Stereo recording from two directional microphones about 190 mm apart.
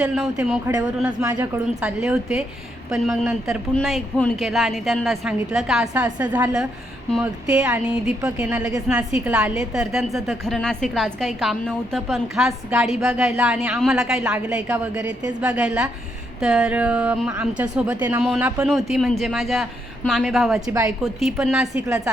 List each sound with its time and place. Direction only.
0.7 s a woman's voice: 10° right (ahead or behind)
1.8 s a woman's voice: 5° right (ahead or behind)
20.7 s a woman's voice: 15° right (ahead or behind)
21.0 s a woman's voice: centre (ahead or behind)